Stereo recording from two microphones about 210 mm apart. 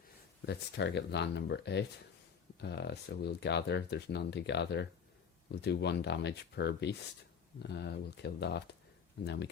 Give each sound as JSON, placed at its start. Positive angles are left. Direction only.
{"t": 0.4, "sound": "speech", "side_deg": 55}